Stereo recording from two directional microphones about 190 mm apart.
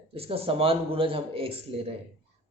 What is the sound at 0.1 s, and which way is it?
A man's voice, 30° right (ahead or behind).